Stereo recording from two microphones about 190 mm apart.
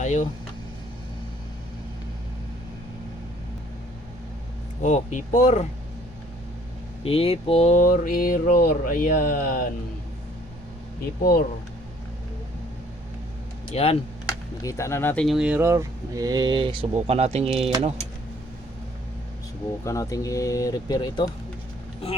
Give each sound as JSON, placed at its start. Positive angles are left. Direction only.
{"t": 0.0, "sound": "speech", "side_deg": 40}
{"t": 4.8, "sound": "speech", "side_deg": 40}
{"t": 7.0, "sound": "speech", "side_deg": 30}
{"t": 11.2, "sound": "speech", "side_deg": 50}
{"t": 13.7, "sound": "speech", "side_deg": 35}
{"t": 14.6, "sound": "speech", "side_deg": 15}
{"t": 19.8, "sound": "speech", "side_deg": 15}